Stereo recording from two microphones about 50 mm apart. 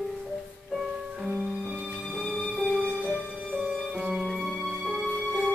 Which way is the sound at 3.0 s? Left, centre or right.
Centre.